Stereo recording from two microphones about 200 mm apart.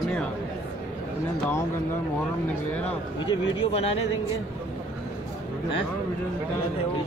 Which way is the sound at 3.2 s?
25° left (ahead or behind).